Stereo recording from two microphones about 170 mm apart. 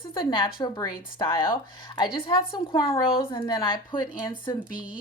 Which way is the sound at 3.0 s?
30° left (ahead or behind).